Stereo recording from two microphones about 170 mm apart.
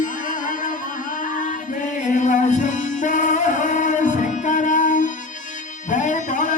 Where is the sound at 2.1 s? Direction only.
45° left (ahead or behind).